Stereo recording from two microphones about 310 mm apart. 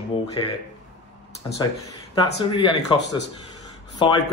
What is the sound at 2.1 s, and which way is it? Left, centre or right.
Speech, centre.